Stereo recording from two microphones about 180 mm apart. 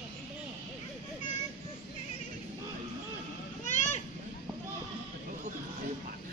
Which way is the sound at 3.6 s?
40° left (ahead or behind).